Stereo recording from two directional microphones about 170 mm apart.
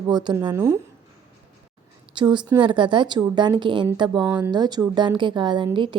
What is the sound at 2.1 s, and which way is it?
Speech, 25° right (ahead or behind).